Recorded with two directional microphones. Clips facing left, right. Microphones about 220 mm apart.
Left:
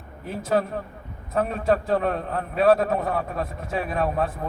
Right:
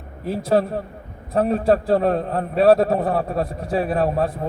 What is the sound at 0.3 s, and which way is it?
A man's voice, 35° right (ahead or behind).